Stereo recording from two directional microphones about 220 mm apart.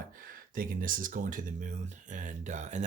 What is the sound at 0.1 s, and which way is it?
Speech, 40° right (ahead or behind).